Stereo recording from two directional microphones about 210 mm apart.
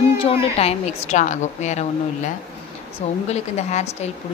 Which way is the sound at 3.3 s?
35° left (ahead or behind).